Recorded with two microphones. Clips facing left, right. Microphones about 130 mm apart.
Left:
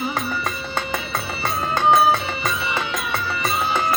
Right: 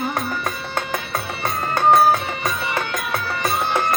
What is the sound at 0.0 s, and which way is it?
Music, centre (ahead or behind).